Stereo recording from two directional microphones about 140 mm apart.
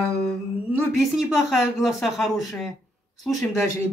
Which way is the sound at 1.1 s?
5° right (ahead or behind).